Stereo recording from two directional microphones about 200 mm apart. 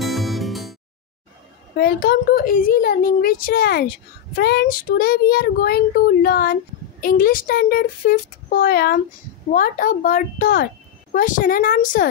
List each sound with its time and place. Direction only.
0.0 s music: centre (ahead or behind)
1.8 s a child's voice: 50° left (ahead or behind)